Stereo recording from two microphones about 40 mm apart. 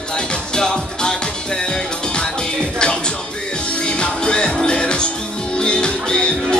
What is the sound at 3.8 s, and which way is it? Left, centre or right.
Music, left.